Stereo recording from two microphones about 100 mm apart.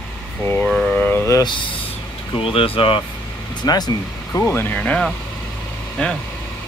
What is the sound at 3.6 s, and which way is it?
Speech, 45° left (ahead or behind).